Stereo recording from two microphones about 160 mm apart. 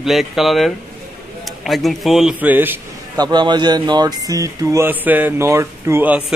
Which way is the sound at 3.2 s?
25° right (ahead or behind).